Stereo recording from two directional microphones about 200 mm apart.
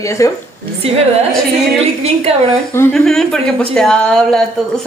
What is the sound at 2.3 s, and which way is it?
Speech, 30° right (ahead or behind).